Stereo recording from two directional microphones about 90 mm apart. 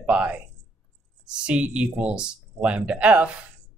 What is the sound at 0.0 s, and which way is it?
Speech, 15° right (ahead or behind).